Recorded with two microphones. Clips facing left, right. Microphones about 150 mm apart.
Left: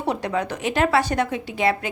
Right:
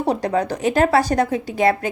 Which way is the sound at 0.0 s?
40° right (ahead or behind).